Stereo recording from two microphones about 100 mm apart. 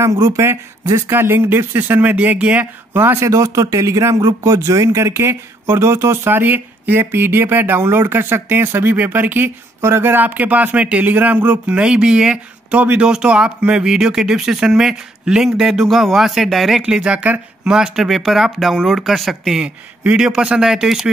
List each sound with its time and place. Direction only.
0.0 s a man's voice: 35° right (ahead or behind); by 21.1 s 5° right (ahead or behind)